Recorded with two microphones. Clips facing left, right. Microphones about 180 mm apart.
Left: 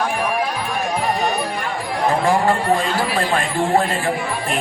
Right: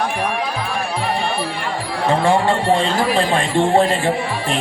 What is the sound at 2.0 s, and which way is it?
Speech, 30° right (ahead or behind).